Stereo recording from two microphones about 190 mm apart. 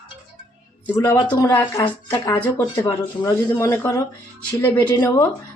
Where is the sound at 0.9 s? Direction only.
15° left (ahead or behind).